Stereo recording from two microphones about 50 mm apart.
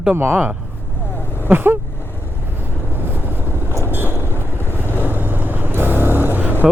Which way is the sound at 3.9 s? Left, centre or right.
Right.